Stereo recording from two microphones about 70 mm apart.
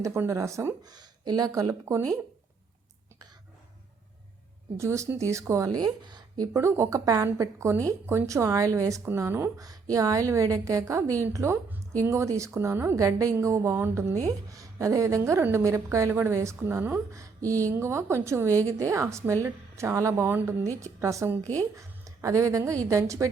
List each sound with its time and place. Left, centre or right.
0.0 s a woman's voice: right
0.8 s speech: right
4.8 s a woman's voice: right
5.8 s speech: right
6.5 s a woman's voice: right
9.1 s a woman's voice: right
9.6 s a woman's voice: right
12.5 s a woman's voice: right
13.0 s a woman's voice: right
14.3 s a woman's voice: right
17.1 s a woman's voice: right
20.3 s a woman's voice: right
20.7 s a woman's voice: right